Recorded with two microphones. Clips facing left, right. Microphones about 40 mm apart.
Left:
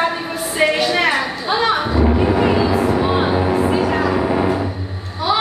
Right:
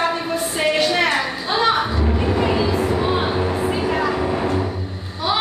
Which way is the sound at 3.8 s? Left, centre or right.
Centre.